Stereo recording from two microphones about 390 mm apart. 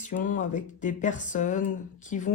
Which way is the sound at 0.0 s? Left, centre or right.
Centre.